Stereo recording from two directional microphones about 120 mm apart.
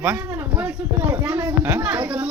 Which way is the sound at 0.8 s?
15° right (ahead or behind).